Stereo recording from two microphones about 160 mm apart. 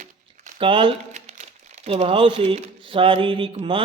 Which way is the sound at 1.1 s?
45° right (ahead or behind).